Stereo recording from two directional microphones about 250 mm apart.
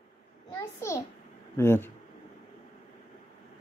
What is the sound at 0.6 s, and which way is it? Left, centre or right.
A child's voice, centre.